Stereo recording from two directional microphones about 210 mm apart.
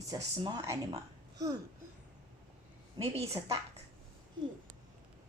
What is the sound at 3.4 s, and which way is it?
Speech, 15° right (ahead or behind).